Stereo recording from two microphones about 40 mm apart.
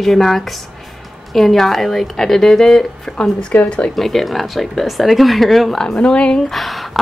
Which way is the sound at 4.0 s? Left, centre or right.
Centre.